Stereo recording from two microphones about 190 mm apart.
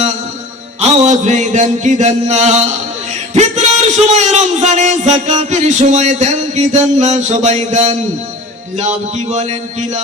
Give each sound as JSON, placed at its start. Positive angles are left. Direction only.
{"t": 0.8, "sound": "music", "side_deg": -40}
{"t": 3.3, "sound": "a man's voice", "side_deg": -35}